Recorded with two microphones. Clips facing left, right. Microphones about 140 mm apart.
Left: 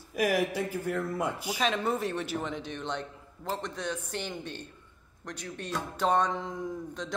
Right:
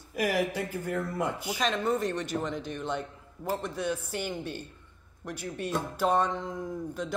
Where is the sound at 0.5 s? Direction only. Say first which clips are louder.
Left 1 dB; 10° left (ahead or behind).